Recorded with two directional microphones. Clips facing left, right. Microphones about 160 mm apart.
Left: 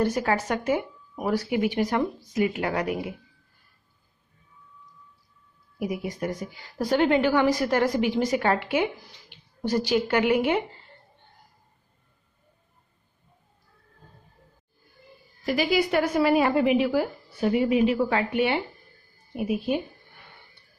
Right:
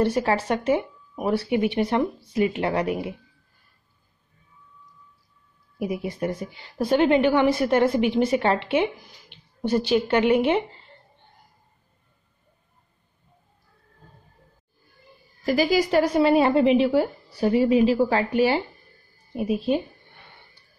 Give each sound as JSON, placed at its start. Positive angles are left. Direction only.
{"t": 0.0, "sound": "a woman's voice", "side_deg": -30}
{"t": 5.8, "sound": "a woman's voice", "side_deg": -30}
{"t": 15.4, "sound": "a woman's voice", "side_deg": -40}